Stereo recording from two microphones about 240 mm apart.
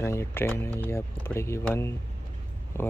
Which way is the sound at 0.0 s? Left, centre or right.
Centre.